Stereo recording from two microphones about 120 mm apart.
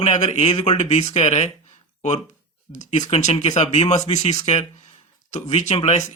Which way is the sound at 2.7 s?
75° left (ahead or behind).